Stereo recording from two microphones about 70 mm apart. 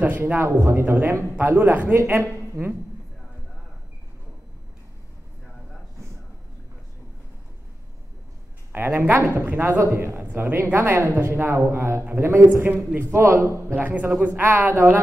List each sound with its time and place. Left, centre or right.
0.0 s a man's voice: right
2.0 s a man's voice: right
8.7 s a man's voice: right
13.0 s a man's voice: right
13.7 s speech: right